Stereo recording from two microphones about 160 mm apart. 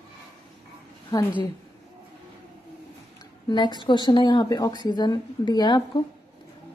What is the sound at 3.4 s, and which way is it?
Speech, 30° left (ahead or behind).